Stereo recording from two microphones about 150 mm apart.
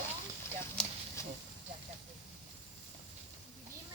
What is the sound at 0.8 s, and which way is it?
Clip-clop, 5° left (ahead or behind).